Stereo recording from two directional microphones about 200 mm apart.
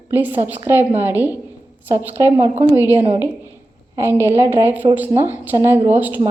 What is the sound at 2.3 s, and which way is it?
Speech, 30° right (ahead or behind).